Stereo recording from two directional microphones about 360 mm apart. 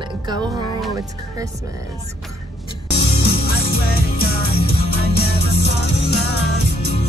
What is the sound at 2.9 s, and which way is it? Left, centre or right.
Music, left.